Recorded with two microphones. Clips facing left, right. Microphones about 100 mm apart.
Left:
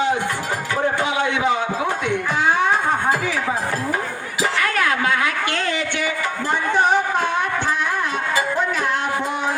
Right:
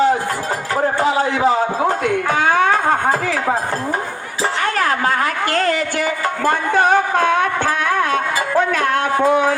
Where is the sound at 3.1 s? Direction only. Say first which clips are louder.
Right 3 dB; 45° right (ahead or behind).